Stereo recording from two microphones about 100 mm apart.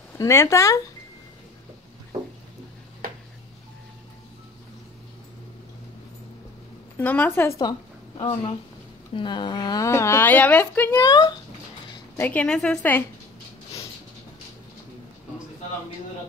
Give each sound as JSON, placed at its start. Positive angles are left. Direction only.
{"t": 0.2, "sound": "a woman's voice", "side_deg": 30}
{"t": 7.0, "sound": "a woman's voice", "side_deg": 20}
{"t": 8.2, "sound": "speech", "side_deg": 60}
{"t": 9.1, "sound": "a woman's voice", "side_deg": 50}
{"t": 10.9, "sound": "speech", "side_deg": 40}
{"t": 12.2, "sound": "a woman's voice", "side_deg": 15}